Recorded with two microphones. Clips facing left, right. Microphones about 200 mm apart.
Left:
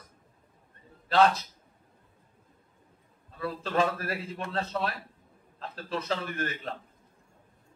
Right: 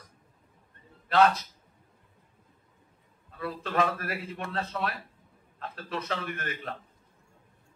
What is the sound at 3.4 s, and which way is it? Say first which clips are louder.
A man's voice: left 1 dB; 30° left (ahead or behind).